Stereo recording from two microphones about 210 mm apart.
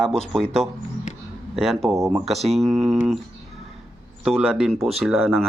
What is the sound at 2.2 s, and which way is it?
Speech, centre (ahead or behind).